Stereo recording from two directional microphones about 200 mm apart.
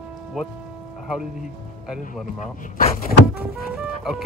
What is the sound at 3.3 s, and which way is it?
Speech, 5° right (ahead or behind).